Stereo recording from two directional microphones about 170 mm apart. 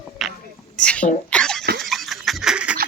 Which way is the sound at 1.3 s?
5° left (ahead or behind).